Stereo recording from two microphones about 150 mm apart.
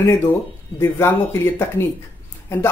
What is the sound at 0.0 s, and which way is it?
Speech, 15° left (ahead or behind).